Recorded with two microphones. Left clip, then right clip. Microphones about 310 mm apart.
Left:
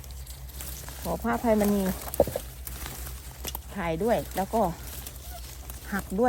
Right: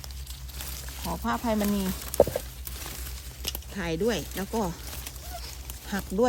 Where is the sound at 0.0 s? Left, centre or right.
Centre.